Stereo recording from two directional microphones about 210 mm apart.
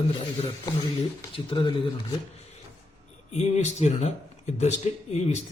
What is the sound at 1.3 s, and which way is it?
Speech, 20° left (ahead or behind).